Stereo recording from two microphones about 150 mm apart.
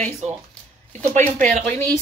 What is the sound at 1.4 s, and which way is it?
Speech, 55° right (ahead or behind).